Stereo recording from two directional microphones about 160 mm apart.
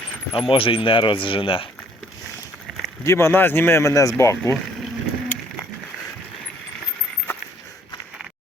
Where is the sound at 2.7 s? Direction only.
Centre (ahead or behind).